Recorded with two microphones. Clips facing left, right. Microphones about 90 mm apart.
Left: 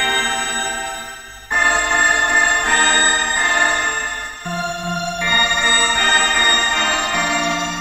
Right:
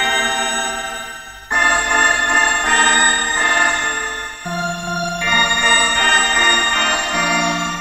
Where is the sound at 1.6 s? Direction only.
20° right (ahead or behind).